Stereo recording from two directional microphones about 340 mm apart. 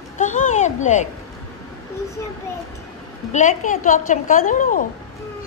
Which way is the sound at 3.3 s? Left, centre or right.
Left.